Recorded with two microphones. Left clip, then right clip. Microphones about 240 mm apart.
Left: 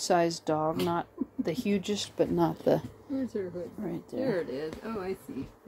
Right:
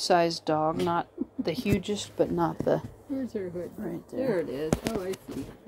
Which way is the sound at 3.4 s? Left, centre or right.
Right.